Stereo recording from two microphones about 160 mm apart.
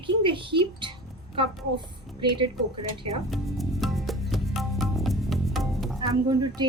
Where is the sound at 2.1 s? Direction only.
30° right (ahead or behind).